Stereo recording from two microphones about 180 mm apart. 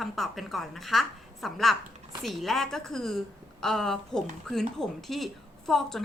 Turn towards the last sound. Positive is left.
turn(degrees=0)  # may be behind; listen again after turning